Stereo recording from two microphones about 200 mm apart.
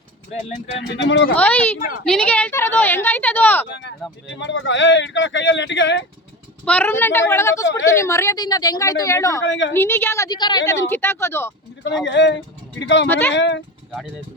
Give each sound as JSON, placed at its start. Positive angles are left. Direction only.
{"t": 0.8, "sound": "speech", "side_deg": 65}
{"t": 1.4, "sound": "speech", "side_deg": 5}
{"t": 3.7, "sound": "speech", "side_deg": 60}
{"t": 6.7, "sound": "speech", "side_deg": 10}
{"t": 9.4, "sound": "a woman's voice", "side_deg": 65}
{"t": 9.7, "sound": "speech", "side_deg": 10}
{"t": 12.0, "sound": "a woman's voice", "side_deg": 65}
{"t": 13.1, "sound": "speech", "side_deg": 10}
{"t": 13.3, "sound": "a woman's voice", "side_deg": 65}